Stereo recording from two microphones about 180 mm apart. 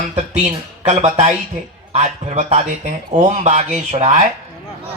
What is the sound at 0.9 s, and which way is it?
A man's voice, 40° right (ahead or behind).